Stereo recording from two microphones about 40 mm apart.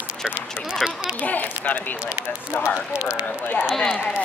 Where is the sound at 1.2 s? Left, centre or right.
Left.